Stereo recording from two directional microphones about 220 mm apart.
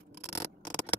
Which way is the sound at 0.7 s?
5° left (ahead or behind).